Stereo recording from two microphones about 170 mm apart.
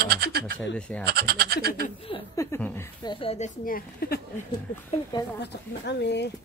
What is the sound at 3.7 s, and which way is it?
Speech, 60° left (ahead or behind).